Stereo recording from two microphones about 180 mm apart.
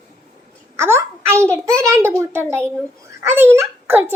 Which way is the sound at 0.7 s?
15° right (ahead or behind).